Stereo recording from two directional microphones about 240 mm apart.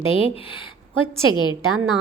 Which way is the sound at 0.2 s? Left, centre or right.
Left.